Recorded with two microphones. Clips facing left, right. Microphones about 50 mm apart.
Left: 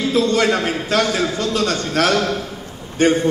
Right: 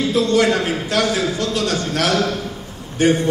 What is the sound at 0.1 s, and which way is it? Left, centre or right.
A man's voice, left.